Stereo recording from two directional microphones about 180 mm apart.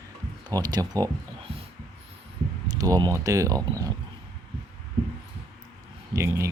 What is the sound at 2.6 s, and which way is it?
Speech, 20° right (ahead or behind).